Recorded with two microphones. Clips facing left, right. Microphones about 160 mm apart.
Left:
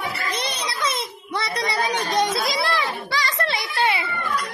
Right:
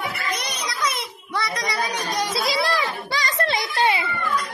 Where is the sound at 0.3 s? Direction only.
30° left (ahead or behind).